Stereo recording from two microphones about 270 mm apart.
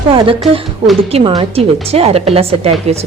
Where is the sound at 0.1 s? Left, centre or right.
Centre.